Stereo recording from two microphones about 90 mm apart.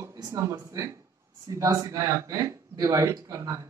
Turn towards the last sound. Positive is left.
turn(degrees=-35)  # may be behind; listen again after turning